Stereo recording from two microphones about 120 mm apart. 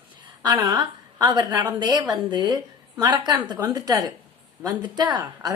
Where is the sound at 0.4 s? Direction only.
35° right (ahead or behind).